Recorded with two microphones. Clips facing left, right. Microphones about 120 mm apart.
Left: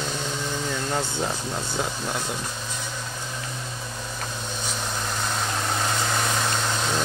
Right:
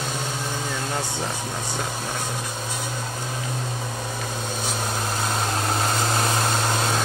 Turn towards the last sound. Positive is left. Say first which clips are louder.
# right 3 dB
turn(degrees=-45)  # may be behind; listen again after turning